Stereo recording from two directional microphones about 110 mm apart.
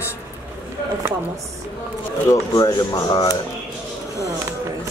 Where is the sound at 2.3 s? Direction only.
35° left (ahead or behind).